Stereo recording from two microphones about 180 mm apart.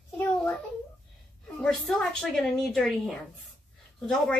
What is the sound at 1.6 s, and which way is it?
A woman's voice, centre (ahead or behind).